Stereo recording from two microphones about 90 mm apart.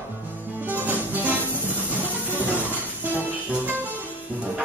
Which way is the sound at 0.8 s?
20° right (ahead or behind).